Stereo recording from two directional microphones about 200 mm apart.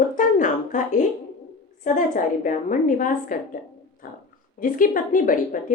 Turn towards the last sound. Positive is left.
turn(degrees=40)  # may be behind; listen again after turning